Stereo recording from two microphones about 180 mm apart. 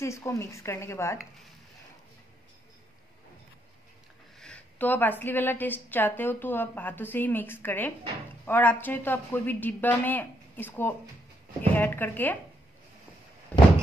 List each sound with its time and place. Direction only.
0.0 s a woman's voice: 15° left (ahead or behind)
4.4 s a woman's voice: 5° left (ahead or behind)